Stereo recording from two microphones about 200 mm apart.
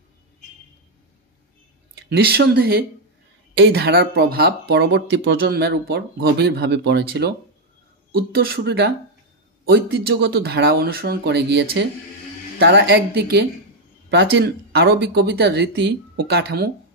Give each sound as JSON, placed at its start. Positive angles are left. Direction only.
{"t": 2.0, "sound": "speech", "side_deg": -50}
{"t": 5.5, "sound": "speech", "side_deg": -55}